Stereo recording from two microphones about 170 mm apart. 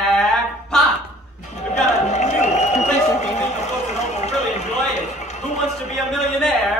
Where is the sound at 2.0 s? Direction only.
45° left (ahead or behind).